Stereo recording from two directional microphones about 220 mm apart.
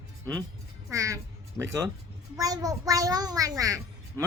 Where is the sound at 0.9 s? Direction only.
15° right (ahead or behind).